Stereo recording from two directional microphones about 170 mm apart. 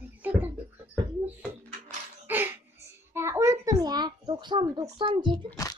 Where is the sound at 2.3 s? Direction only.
10° right (ahead or behind); by 5.3 s 30° right (ahead or behind).